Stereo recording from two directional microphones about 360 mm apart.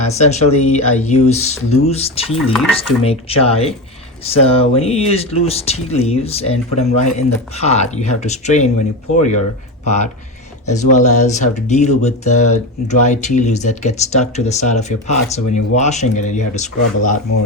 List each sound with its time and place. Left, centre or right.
0.0 s speech: centre
1.2 s speech: left
1.8 s speech: centre
9.8 s speech: centre